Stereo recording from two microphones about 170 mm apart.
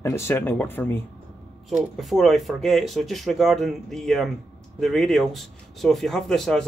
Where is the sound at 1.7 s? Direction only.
Centre (ahead or behind).